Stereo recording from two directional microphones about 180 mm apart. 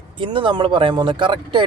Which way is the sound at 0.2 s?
25° right (ahead or behind).